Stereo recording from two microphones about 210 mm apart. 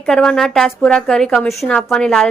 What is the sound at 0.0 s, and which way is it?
A woman's voice, centre (ahead or behind).